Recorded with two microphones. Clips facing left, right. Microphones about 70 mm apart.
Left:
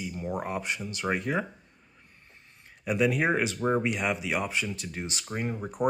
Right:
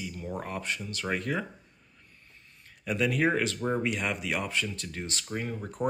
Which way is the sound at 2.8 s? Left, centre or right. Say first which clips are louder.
Left 1 dB; centre.